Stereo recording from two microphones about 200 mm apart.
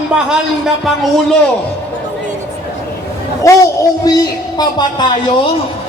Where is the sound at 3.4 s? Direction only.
15° left (ahead or behind).